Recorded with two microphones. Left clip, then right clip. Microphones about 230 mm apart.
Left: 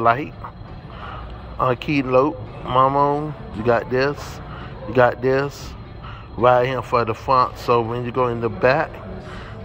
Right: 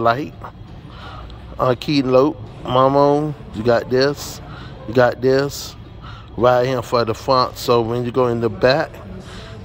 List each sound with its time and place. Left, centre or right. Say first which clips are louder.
0.0 s speech: even; right
1.6 s speech: right 2 dB; right